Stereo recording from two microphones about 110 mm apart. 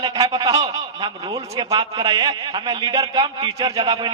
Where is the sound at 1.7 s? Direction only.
35° right (ahead or behind).